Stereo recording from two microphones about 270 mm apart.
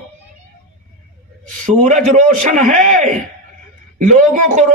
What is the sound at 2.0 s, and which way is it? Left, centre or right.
Speech, right.